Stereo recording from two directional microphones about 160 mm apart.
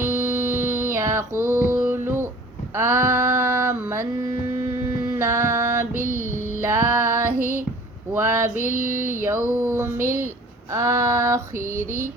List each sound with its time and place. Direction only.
0.0 s music: 15° right (ahead or behind)
2.7 s a sound: 15° right (ahead or behind)
4.7 s female singing: 15° right (ahead or behind)
7.3 s female singing: 55° right (ahead or behind)
8.8 s a sound: 55° left (ahead or behind)
9.6 s female singing: 15° right (ahead or behind)